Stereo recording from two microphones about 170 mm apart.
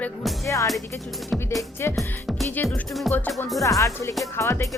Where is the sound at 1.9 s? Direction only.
Centre (ahead or behind).